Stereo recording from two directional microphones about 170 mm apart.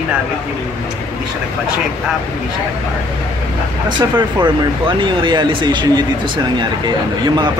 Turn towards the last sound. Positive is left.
turn(degrees=-30)  # may be behind; listen again after turning